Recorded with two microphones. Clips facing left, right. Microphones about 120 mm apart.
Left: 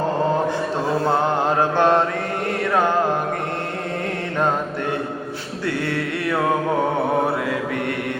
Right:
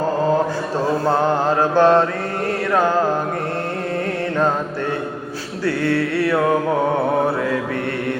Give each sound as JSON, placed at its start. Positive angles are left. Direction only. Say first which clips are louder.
{"t": 1.5, "sound": "mantra", "louder": "right 4 dB", "side_deg": 20}
{"t": 2.7, "sound": "music", "louder": "right 2 dB", "side_deg": 20}